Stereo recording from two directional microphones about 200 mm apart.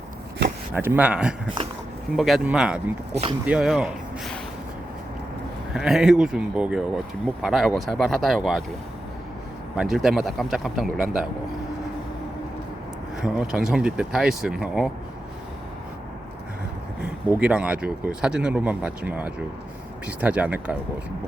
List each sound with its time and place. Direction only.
0.7 s speech: 10° right (ahead or behind)
3.1 s speech: 30° right (ahead or behind)
3.4 s speech: 5° right (ahead or behind)
5.7 s speech: 5° right (ahead or behind)
9.7 s speech: centre (ahead or behind)
13.2 s speech: 5° right (ahead or behind)
17.2 s speech: 5° right (ahead or behind)